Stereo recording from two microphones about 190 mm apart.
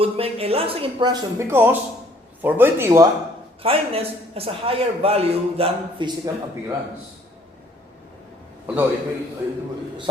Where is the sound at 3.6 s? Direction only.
30° right (ahead or behind).